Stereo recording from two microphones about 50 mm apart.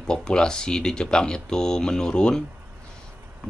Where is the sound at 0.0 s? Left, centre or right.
Centre.